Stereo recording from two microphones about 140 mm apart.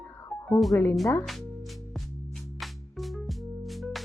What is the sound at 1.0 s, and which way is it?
Speech, 20° left (ahead or behind).